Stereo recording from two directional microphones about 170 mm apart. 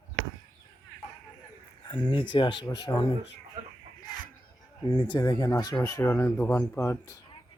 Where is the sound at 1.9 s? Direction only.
30° left (ahead or behind).